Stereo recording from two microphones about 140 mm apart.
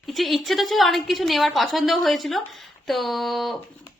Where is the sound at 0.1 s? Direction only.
Centre (ahead or behind).